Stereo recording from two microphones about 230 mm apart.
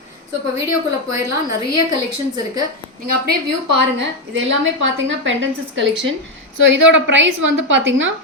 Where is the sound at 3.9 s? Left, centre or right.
Right.